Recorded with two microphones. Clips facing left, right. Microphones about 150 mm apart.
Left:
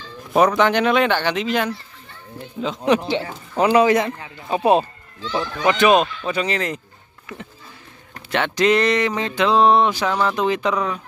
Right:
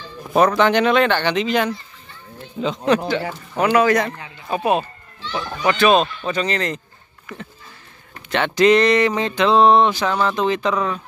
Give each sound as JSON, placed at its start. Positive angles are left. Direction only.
{"t": 0.5, "sound": "a sound", "side_deg": 5}
{"t": 3.1, "sound": "a man's voice", "side_deg": 25}
{"t": 5.7, "sound": "speech", "side_deg": 15}
{"t": 6.2, "sound": "speech", "side_deg": 5}
{"t": 8.3, "sound": "a sound", "side_deg": 0}
{"t": 10.2, "sound": "speech", "side_deg": 10}